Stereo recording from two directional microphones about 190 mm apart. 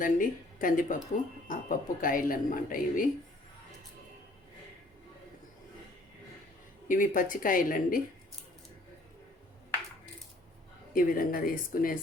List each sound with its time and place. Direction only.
0.0 s speech: 45° left (ahead or behind)
6.8 s speech: 45° left (ahead or behind)
10.9 s speech: 50° left (ahead or behind)